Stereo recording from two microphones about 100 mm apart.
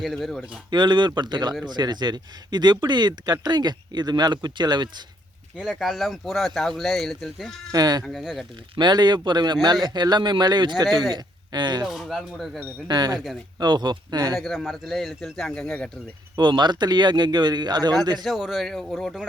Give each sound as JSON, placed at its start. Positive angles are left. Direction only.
{"t": 0.0, "sound": "speech", "side_deg": 0}
{"t": 0.7, "sound": "speech", "side_deg": -50}
{"t": 5.5, "sound": "speech", "side_deg": -5}
{"t": 7.7, "sound": "speech", "side_deg": -40}
{"t": 8.0, "sound": "speech", "side_deg": 0}
{"t": 8.7, "sound": "speech", "side_deg": -45}
{"t": 11.9, "sound": "speech", "side_deg": 0}
{"t": 12.9, "sound": "speech", "side_deg": -40}
{"t": 14.3, "sound": "speech", "side_deg": 0}
{"t": 16.3, "sound": "speech", "side_deg": -50}
{"t": 18.2, "sound": "speech", "side_deg": 0}